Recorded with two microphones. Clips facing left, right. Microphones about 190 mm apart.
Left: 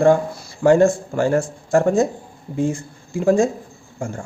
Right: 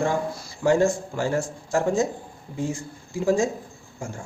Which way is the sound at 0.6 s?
55° left (ahead or behind).